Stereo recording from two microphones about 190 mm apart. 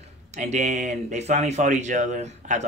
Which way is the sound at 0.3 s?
35° right (ahead or behind).